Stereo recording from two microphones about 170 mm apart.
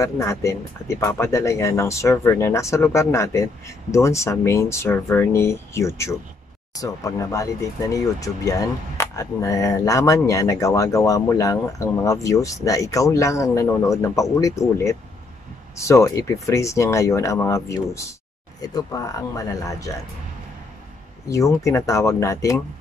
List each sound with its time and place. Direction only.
0.0 s speech: 20° left (ahead or behind)
21.3 s speech: 20° left (ahead or behind)